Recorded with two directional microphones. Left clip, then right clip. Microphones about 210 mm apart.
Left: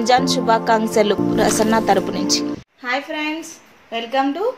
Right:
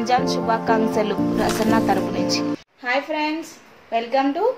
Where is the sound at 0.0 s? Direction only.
20° left (ahead or behind).